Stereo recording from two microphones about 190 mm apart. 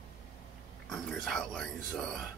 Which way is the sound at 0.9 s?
5° left (ahead or behind).